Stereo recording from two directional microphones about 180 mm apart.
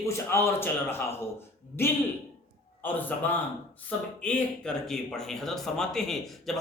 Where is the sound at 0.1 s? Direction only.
15° left (ahead or behind).